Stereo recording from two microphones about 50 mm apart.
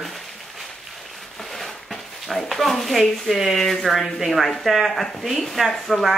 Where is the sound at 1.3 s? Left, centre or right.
Centre.